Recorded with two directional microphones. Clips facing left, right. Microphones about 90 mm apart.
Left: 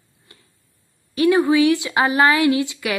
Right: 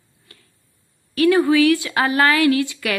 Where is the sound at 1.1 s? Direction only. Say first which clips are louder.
Even; 20° left (ahead or behind).